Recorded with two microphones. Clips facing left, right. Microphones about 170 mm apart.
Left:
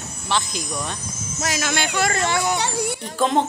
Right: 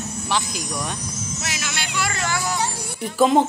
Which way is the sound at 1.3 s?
45° left (ahead or behind).